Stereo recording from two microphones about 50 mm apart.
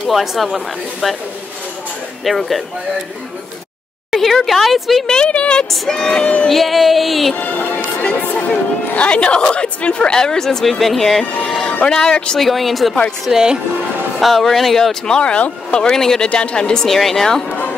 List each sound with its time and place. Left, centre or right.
0.0 s speech: centre
2.2 s speech: centre
4.1 s speech: centre
5.0 s speech: centre
5.7 s speech: centre
6.5 s speech: centre
7.3 s speech: left; by 11.2 s centre
11.4 s music: centre
11.9 s speech: centre
12.4 s speech: centre
14.2 s speech: centre
16.8 s speech: centre